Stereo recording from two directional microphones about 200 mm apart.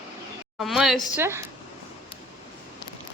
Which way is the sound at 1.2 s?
15° right (ahead or behind).